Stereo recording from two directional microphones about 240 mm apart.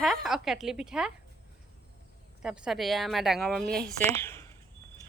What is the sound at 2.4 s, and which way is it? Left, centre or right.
A woman's voice, centre.